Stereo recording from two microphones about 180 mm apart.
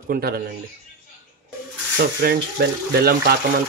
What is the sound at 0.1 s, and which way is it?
Speech, 60° right (ahead or behind).